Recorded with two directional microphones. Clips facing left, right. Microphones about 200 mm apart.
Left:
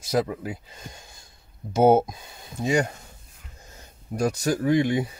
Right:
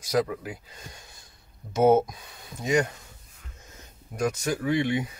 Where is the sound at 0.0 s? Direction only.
25° left (ahead or behind).